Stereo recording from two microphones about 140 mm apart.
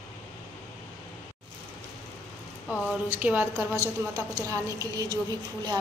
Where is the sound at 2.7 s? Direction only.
5° right (ahead or behind); by 5.1 s 25° right (ahead or behind).